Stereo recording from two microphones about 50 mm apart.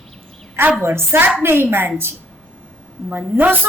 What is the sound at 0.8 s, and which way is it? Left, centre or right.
A woman's voice, right.